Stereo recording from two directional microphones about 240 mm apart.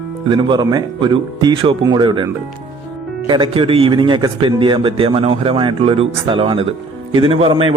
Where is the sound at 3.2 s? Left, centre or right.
Centre.